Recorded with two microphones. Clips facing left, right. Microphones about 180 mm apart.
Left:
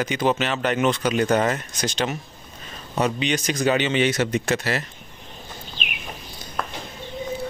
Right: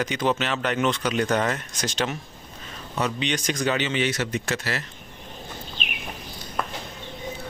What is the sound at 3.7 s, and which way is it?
Speech, 20° left (ahead or behind).